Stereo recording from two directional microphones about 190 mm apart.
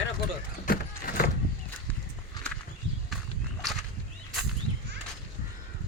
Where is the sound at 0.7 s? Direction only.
50° left (ahead or behind).